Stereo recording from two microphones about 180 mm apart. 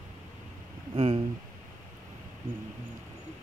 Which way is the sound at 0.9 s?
30° right (ahead or behind).